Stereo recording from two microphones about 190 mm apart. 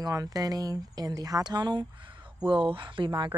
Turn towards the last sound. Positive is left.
turn(degrees=-25)  # may be behind; listen again after turning